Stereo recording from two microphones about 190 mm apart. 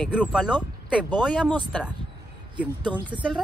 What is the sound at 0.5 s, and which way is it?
Speech, 10° left (ahead or behind).